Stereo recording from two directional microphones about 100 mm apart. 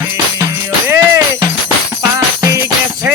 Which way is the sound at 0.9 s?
30° right (ahead or behind).